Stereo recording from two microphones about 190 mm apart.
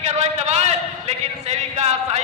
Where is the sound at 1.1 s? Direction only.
35° right (ahead or behind).